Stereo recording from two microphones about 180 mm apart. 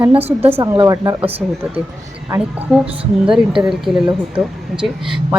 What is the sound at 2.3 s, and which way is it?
Speech, 5° right (ahead or behind).